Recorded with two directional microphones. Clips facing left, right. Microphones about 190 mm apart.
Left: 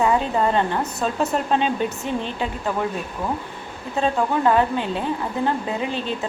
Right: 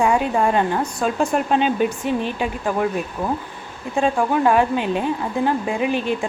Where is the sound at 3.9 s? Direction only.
15° right (ahead or behind).